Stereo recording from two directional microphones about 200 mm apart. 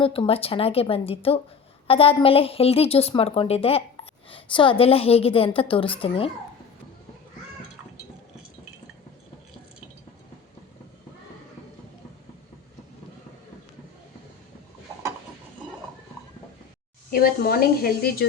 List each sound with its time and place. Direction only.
0.0 s a woman's voice: 25° left (ahead or behind)
17.1 s speech: 50° left (ahead or behind)